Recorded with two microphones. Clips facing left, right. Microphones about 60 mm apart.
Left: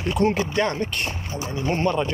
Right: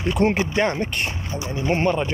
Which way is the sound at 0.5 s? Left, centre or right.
Right.